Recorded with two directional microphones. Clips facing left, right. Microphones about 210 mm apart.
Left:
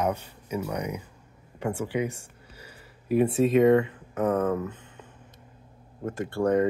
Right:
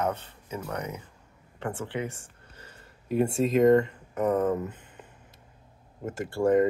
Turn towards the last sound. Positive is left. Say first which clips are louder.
# even
turn(degrees=0)  # may be behind; listen again after turning